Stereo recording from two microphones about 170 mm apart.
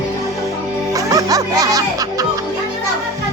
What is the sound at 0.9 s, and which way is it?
Music, 20° right (ahead or behind).